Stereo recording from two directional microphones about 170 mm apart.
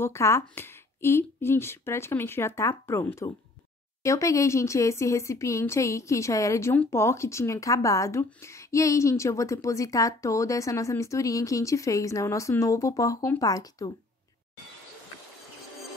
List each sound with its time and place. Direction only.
0.0 s a woman's voice: 15° left (ahead or behind)